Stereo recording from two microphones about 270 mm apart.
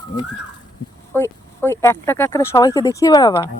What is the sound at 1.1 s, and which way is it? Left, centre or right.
Speech, centre.